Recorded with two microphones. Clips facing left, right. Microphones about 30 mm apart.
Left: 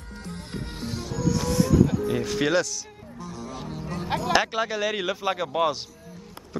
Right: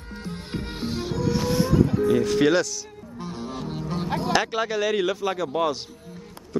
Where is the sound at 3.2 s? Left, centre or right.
Right.